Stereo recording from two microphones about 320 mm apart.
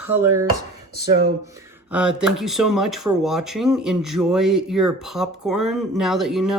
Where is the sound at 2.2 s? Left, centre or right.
Centre.